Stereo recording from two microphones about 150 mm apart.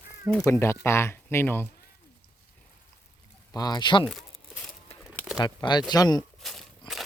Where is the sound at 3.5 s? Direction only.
25° left (ahead or behind).